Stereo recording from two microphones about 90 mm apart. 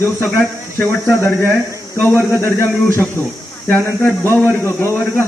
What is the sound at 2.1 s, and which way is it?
Speech, 25° left (ahead or behind).